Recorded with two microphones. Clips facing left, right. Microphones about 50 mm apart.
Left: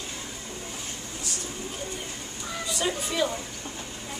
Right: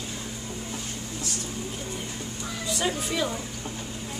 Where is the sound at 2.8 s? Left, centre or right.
Centre.